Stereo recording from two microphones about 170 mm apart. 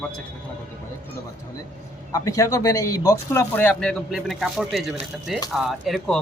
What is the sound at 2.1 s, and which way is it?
A man's voice, 20° left (ahead or behind).